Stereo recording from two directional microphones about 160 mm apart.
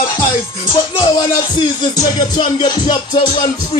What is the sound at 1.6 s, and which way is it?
Music, 30° left (ahead or behind).